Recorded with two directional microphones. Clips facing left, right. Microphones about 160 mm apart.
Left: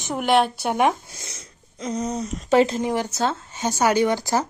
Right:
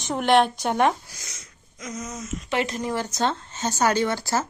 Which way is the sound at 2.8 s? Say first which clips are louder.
Left 2 dB; 15° left (ahead or behind).